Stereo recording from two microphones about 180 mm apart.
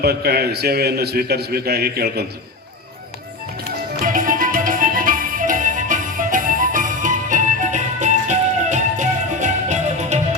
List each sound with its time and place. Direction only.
0.0 s a man's voice: 60° right (ahead or behind)
4.0 s music: 50° right (ahead or behind)